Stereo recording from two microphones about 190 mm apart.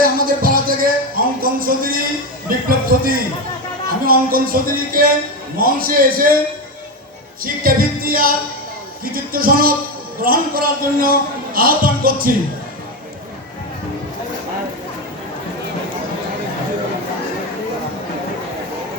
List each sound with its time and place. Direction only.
0.0 s music: 50° right (ahead or behind)
2.6 s a sound: 50° right (ahead or behind)
4.0 s music: 50° right (ahead or behind)
5.5 s a man's voice: 50° right (ahead or behind)
7.4 s a man's voice: 50° right (ahead or behind)